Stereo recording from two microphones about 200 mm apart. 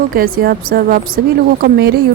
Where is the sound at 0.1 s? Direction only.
45° right (ahead or behind).